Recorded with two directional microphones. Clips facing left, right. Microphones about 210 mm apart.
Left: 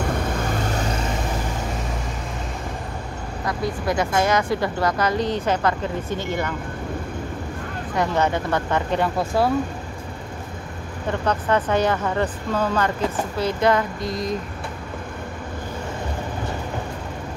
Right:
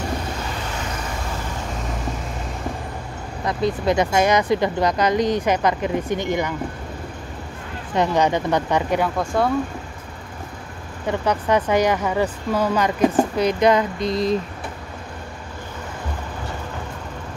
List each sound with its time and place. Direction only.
3.4 s speech: 20° right (ahead or behind)
7.9 s speech: 20° right (ahead or behind)
9.0 s speech: 5° left (ahead or behind)
11.1 s speech: 15° right (ahead or behind)